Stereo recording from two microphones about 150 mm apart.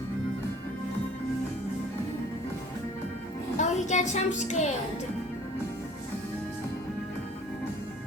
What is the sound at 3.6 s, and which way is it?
A woman's voice, 50° left (ahead or behind).